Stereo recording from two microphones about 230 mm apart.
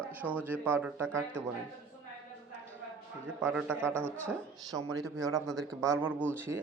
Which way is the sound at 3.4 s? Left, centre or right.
Centre.